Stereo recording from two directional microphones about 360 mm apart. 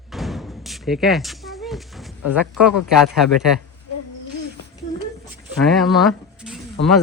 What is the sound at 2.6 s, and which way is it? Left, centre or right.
Speech, centre.